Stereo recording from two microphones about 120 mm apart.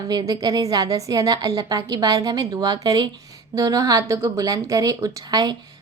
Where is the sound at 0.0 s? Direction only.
30° right (ahead or behind).